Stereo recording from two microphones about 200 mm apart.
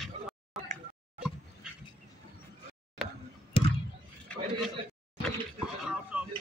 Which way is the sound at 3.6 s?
25° left (ahead or behind).